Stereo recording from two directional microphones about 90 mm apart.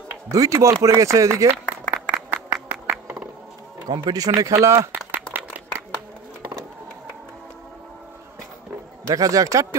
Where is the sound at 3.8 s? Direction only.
55° right (ahead or behind).